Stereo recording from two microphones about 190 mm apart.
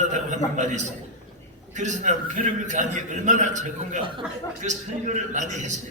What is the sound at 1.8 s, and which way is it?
A man's voice, 40° right (ahead or behind).